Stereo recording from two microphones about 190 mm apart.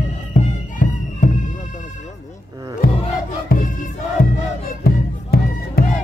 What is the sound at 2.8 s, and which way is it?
Music, 50° left (ahead or behind).